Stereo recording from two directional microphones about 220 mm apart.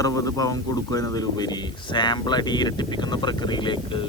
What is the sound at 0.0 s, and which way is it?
Speech, 15° left (ahead or behind).